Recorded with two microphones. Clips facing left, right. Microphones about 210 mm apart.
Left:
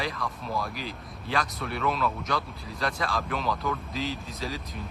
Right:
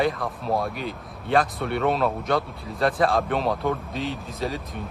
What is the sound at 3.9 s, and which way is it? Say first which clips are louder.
Speech: right 3 dB; centre (ahead or behind).